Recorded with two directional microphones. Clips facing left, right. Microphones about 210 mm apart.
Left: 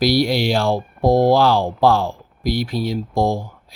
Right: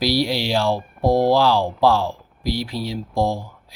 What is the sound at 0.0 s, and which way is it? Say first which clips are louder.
Speech: left 4 dB; 50° left (ahead or behind).